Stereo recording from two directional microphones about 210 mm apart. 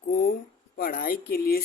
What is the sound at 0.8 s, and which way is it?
Music, 40° left (ahead or behind).